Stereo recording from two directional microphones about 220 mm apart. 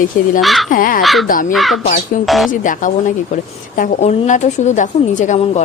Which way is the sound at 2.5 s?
35° left (ahead or behind).